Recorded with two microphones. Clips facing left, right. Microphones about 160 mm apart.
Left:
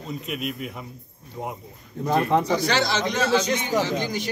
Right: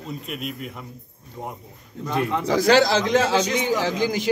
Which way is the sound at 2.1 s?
60° left (ahead or behind).